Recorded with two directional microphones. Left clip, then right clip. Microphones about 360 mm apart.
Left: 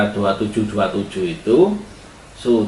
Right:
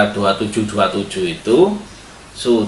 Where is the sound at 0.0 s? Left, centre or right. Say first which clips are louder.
Right 3 dB; centre.